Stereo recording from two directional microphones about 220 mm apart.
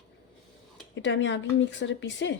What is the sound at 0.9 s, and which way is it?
A woman's voice, 55° left (ahead or behind).